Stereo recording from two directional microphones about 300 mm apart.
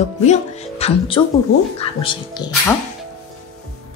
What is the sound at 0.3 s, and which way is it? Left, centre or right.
Speech, left.